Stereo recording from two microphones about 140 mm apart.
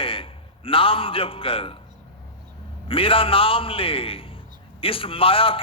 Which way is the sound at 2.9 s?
40° left (ahead or behind).